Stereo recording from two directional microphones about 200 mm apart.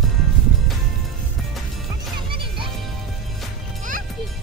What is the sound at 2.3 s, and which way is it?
Music, 25° right (ahead or behind).